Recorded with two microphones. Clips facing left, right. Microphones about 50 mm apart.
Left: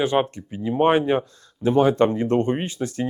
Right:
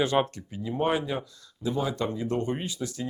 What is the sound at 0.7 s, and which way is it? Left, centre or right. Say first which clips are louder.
Speech: left 9 dB; left.